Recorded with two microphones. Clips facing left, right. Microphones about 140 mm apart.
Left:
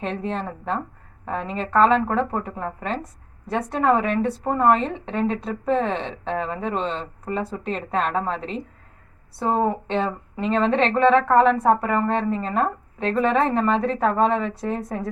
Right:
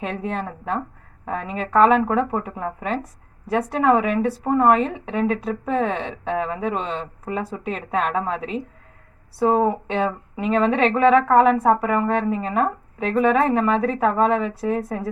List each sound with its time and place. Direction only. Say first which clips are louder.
0.0 s speech: even; 10° right (ahead or behind)